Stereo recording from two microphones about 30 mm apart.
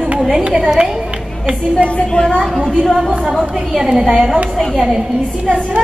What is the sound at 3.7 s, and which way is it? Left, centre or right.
Speech, centre.